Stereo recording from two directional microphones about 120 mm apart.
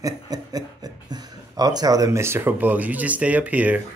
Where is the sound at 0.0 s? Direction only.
30° right (ahead or behind).